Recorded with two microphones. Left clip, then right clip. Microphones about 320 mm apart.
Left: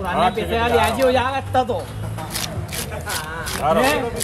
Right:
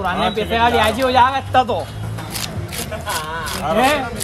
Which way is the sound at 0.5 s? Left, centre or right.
Centre.